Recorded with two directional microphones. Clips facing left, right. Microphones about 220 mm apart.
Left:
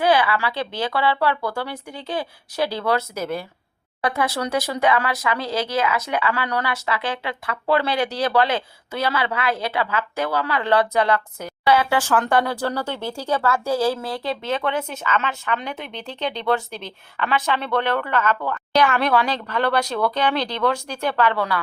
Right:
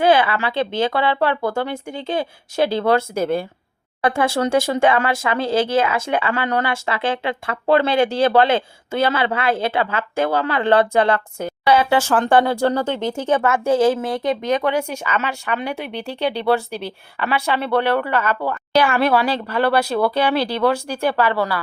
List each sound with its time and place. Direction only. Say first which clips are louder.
0.0 s speech: right 3 dB; 25° right (ahead or behind); by 21.6 s 5° right (ahead or behind)